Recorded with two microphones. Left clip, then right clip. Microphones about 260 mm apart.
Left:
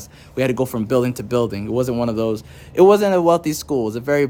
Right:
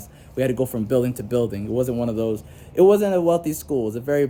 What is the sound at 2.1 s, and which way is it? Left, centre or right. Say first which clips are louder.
Speech: left 3 dB; left.